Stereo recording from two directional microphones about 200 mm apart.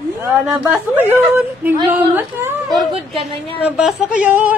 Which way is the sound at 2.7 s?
Centre (ahead or behind).